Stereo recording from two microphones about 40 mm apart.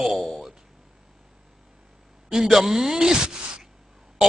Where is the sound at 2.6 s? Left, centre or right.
Right.